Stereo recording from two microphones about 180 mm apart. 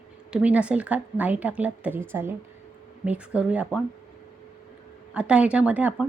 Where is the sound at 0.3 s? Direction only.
5° right (ahead or behind).